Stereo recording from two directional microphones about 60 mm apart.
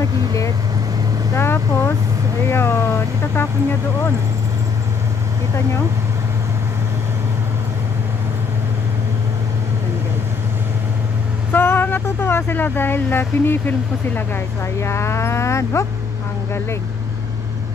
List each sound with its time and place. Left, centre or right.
1.3 s speech: left
11.5 s speech: left
14.8 s speech: left